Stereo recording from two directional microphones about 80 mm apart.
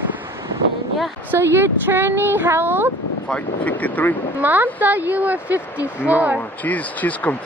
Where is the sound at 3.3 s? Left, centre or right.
Centre.